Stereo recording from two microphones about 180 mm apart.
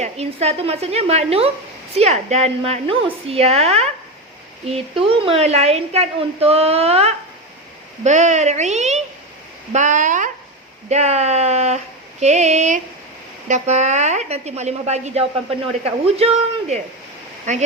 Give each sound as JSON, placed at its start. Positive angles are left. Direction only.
{"t": 0.0, "sound": "a woman's voice", "side_deg": -35}
{"t": 12.2, "sound": "a sound", "side_deg": -40}
{"t": 13.5, "sound": "a woman's voice", "side_deg": -40}